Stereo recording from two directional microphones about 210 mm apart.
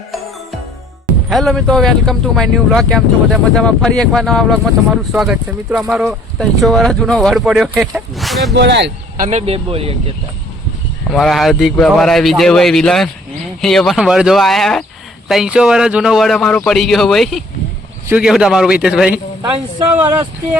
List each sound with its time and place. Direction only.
1.3 s speech: centre (ahead or behind)
8.5 s speech: 55° right (ahead or behind)
9.2 s speech: 30° right (ahead or behind)
11.1 s speech: centre (ahead or behind)